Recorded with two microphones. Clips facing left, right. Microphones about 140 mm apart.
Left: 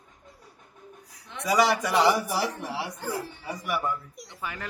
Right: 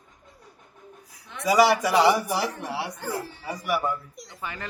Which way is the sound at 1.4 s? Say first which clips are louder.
Right 4 dB; 5° right (ahead or behind).